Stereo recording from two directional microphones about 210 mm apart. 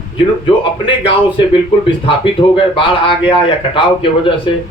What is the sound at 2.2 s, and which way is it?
Speech, 25° left (ahead or behind).